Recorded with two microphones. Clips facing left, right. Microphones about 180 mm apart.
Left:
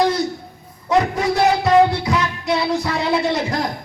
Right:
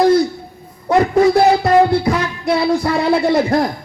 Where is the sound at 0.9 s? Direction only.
55° right (ahead or behind).